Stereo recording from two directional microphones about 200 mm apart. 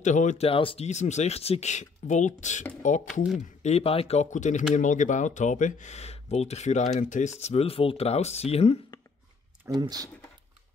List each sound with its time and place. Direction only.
0.0 s speech: 35° left (ahead or behind)
9.8 s speech: 20° right (ahead or behind)